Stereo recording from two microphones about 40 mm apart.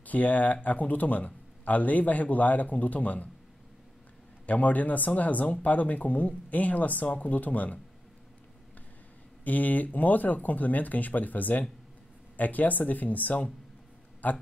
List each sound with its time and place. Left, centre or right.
0.0 s speech: left
4.5 s speech: left
9.4 s speech: left